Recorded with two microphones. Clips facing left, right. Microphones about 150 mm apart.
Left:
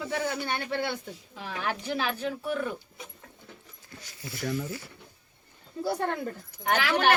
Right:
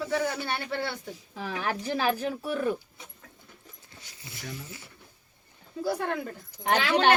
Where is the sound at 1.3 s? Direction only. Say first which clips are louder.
Right 2 dB; 40° right (ahead or behind).